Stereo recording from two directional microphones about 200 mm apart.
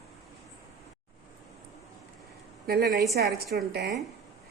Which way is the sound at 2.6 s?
50° right (ahead or behind).